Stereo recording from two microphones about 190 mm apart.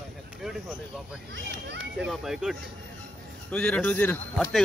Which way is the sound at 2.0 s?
5° right (ahead or behind).